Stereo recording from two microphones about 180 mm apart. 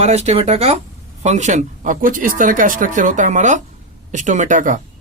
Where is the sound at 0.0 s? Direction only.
35° right (ahead or behind).